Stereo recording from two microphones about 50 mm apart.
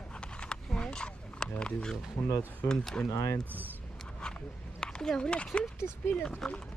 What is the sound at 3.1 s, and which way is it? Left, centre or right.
Speech, left.